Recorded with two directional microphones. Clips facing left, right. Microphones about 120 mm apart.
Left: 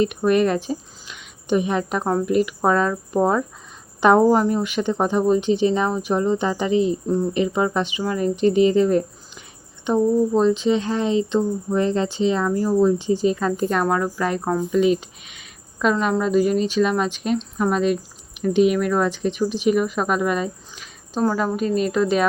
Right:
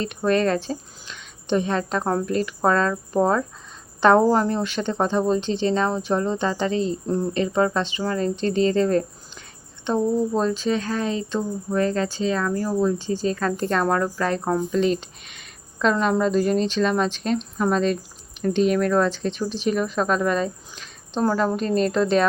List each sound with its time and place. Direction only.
0.0 s speech: 15° left (ahead or behind)